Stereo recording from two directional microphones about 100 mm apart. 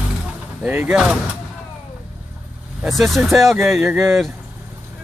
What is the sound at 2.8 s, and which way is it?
Speech, centre (ahead or behind).